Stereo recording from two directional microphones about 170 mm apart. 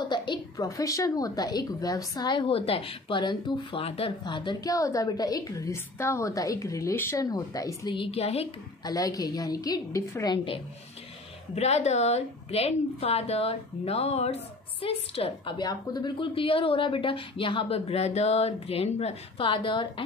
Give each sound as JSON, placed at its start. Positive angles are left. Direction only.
{"t": 0.0, "sound": "a woman's voice", "side_deg": 25}
{"t": 8.8, "sound": "a woman's voice", "side_deg": 20}
{"t": 11.5, "sound": "a woman's voice", "side_deg": 40}